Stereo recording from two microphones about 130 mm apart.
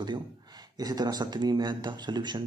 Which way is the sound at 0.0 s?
35° right (ahead or behind).